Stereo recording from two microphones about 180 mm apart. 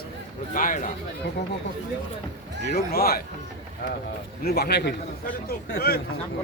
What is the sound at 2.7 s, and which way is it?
Speech, 60° left (ahead or behind).